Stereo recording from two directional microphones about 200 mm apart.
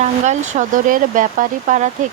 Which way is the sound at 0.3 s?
35° right (ahead or behind).